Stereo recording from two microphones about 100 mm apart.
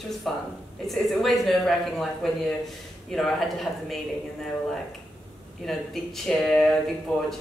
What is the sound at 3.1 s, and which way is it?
Speech, centre (ahead or behind).